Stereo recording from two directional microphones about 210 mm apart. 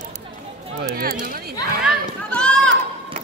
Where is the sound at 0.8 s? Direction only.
45° right (ahead or behind).